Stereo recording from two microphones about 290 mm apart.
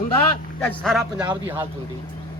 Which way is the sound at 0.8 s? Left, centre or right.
Centre.